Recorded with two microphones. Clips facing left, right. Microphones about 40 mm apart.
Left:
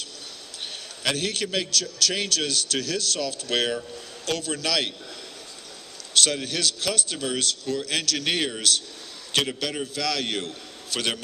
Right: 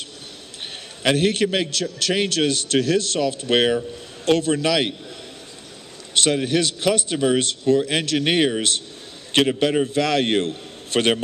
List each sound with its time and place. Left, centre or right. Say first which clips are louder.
1.0 s a man's voice: right 8 dB; right
6.1 s a man's voice: right 5 dB; right